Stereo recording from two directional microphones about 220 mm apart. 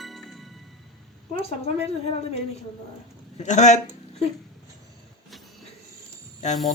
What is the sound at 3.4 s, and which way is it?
Speech, 30° left (ahead or behind).